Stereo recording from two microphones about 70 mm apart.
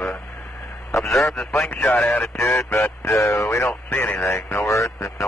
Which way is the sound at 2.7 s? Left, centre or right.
Left.